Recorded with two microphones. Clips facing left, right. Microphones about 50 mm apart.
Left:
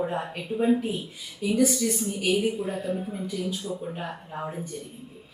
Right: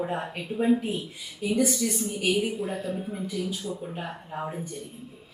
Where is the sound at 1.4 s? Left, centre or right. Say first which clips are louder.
Left 1 dB; centre.